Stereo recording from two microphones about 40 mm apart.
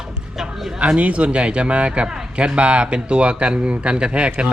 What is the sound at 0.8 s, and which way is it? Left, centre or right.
A man's voice, right.